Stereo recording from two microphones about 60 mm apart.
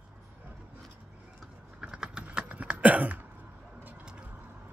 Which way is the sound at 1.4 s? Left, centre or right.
Centre.